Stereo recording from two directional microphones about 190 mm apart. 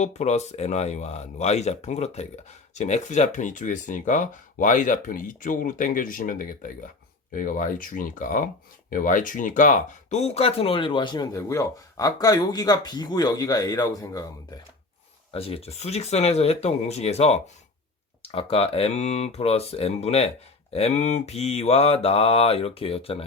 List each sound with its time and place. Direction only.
0.0 s mantra: 35° left (ahead or behind)
2.7 s speech: 40° left (ahead or behind); by 14.3 s 15° left (ahead or behind)
15.3 s mantra: 30° left (ahead or behind)